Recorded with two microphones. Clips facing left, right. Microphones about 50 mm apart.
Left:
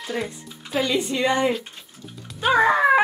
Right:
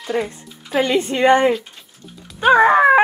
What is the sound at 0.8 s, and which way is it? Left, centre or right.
Speech, right.